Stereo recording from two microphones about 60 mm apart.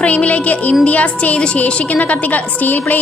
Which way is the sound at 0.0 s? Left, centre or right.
Left.